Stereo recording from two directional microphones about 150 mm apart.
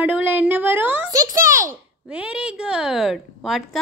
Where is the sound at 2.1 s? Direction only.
5° right (ahead or behind).